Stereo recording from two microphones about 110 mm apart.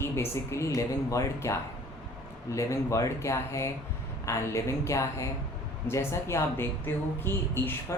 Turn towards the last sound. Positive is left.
turn(degrees=20)  # may be behind; listen again after turning